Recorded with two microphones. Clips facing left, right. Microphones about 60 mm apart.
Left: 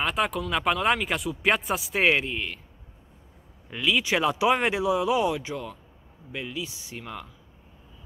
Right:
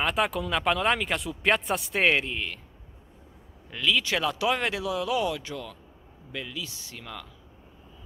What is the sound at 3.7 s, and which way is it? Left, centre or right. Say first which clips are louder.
Speech: left 1 dB; centre.